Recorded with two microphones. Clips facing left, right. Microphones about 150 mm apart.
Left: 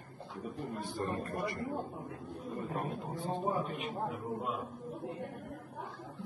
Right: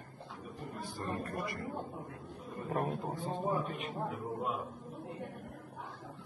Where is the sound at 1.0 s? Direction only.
25° left (ahead or behind).